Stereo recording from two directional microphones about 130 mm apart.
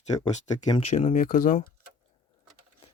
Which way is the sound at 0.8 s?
80° left.